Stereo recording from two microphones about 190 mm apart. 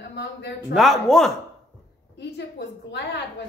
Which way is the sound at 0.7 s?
Centre (ahead or behind).